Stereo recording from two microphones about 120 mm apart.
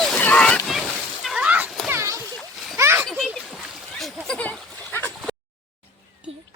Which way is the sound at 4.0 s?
Centre (ahead or behind).